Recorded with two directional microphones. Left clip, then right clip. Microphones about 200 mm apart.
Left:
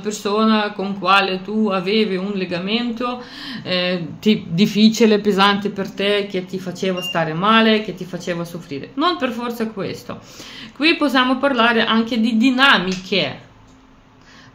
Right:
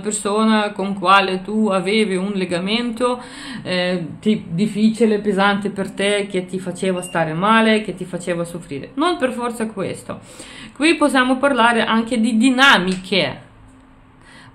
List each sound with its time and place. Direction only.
0.0 s speech: 15° right (ahead or behind)
4.6 s speech: 30° left (ahead or behind)
5.3 s speech: centre (ahead or behind)
5.6 s speech: 20° right (ahead or behind)